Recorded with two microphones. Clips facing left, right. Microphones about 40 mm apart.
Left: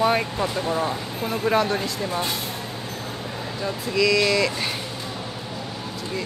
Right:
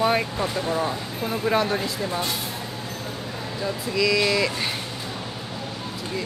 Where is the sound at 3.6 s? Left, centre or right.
Centre.